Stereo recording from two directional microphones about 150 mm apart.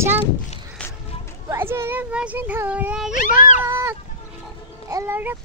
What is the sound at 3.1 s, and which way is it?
Speech, 55° left (ahead or behind).